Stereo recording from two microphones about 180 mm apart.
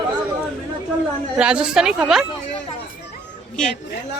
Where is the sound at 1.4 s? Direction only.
5° right (ahead or behind).